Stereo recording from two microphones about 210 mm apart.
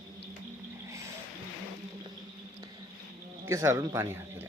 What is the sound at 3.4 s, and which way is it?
A man's voice, 15° right (ahead or behind).